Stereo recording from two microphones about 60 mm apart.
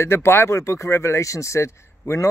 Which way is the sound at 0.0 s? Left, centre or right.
Left.